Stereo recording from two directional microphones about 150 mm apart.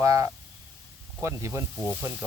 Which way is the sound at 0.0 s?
20° right (ahead or behind).